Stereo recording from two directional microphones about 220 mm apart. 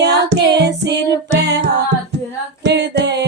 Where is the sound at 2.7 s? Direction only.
50° right (ahead or behind).